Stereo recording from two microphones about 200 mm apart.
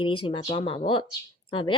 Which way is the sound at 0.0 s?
25° left (ahead or behind).